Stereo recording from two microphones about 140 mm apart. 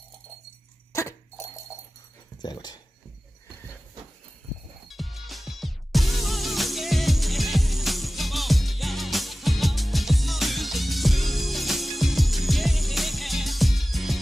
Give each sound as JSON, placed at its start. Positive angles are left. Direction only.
{"t": 2.4, "sound": "dog", "side_deg": 30}
{"t": 4.8, "sound": "music", "side_deg": 0}